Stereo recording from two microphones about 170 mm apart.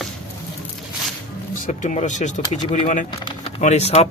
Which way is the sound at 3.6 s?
40° left (ahead or behind).